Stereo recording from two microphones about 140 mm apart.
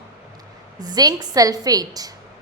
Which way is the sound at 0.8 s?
30° right (ahead or behind).